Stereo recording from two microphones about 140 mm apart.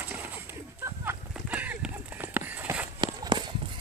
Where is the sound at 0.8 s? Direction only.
15° right (ahead or behind).